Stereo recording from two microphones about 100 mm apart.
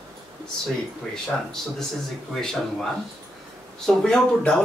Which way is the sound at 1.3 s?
10° left (ahead or behind).